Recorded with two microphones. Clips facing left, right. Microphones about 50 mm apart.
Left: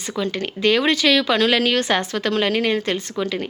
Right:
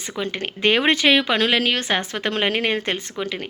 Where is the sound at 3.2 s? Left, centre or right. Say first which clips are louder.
Left 3 dB; centre.